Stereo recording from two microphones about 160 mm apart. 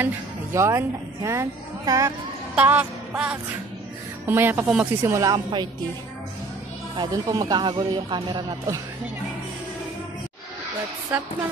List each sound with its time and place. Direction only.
0.0 s speech: 15° right (ahead or behind)
2.5 s music: 10° right (ahead or behind)
4.3 s speech: 15° right (ahead or behind)
5.1 s speech: 20° right (ahead or behind)
7.0 s speech: 25° right (ahead or behind)